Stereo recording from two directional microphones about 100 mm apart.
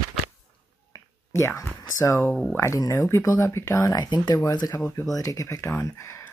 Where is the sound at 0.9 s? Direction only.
30° left (ahead or behind).